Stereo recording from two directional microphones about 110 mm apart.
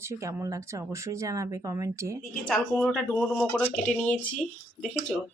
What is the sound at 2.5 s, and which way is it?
Speech, 10° left (ahead or behind).